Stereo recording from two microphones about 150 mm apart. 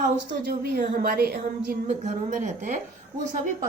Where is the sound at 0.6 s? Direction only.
90° right.